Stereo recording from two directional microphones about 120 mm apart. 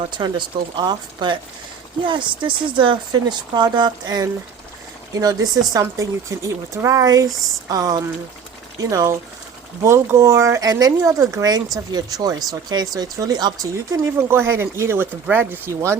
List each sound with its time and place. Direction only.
0.2 s speech: 40° right (ahead or behind); by 16.0 s 25° right (ahead or behind)